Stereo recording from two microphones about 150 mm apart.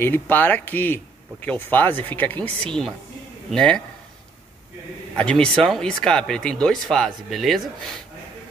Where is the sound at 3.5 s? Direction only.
5° left (ahead or behind).